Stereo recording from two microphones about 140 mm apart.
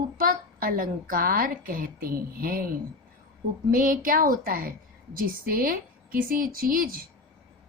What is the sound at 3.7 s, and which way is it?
A woman's voice, 80° right.